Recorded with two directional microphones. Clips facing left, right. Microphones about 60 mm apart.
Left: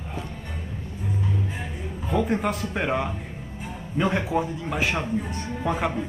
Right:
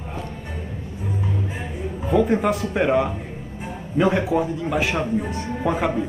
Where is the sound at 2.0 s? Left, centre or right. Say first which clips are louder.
Right 5 dB; centre.